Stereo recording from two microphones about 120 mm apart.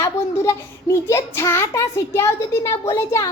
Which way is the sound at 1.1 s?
25° left (ahead or behind).